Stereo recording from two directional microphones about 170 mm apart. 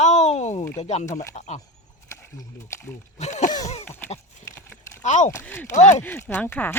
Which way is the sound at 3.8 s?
10° left (ahead or behind).